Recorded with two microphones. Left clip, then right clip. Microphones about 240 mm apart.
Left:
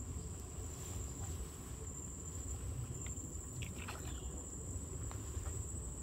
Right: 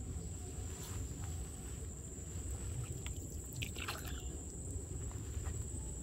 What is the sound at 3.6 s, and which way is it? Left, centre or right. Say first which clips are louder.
Boat: right 6 dB; right.